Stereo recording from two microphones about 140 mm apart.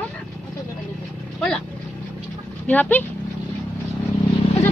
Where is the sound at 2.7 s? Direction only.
10° left (ahead or behind).